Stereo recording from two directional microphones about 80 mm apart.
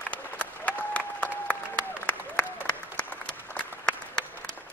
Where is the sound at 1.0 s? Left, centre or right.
Centre.